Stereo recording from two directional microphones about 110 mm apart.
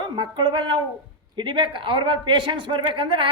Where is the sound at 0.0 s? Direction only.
45° right (ahead or behind).